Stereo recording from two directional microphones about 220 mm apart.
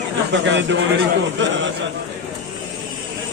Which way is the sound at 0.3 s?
55° right (ahead or behind).